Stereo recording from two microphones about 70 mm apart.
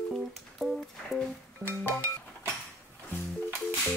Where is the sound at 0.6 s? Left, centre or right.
Centre.